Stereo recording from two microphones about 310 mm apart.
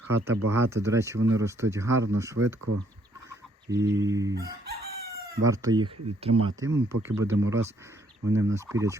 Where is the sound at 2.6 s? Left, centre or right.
Right.